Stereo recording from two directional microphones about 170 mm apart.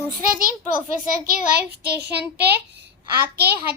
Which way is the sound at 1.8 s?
70° right (ahead or behind).